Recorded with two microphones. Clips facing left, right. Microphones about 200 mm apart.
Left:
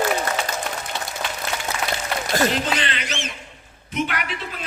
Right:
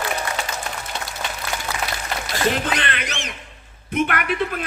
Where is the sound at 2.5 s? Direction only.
55° right (ahead or behind).